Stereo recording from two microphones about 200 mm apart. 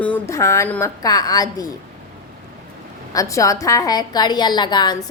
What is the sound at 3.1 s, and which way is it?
A woman's voice, 15° left (ahead or behind).